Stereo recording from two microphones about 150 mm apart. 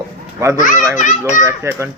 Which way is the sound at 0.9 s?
55° left (ahead or behind).